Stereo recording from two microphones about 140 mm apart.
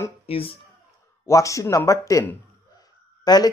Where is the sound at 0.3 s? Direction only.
40° left (ahead or behind).